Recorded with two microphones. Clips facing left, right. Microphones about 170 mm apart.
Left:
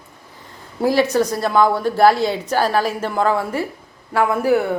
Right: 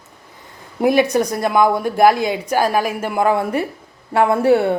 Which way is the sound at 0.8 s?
15° right (ahead or behind).